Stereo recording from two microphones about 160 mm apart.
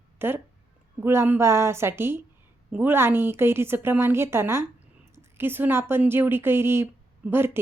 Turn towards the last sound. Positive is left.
turn(degrees=-15)  # may be behind; listen again after turning